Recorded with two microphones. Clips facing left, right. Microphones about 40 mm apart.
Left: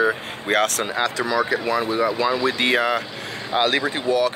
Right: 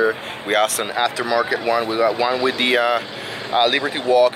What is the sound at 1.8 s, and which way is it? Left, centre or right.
Speech, right.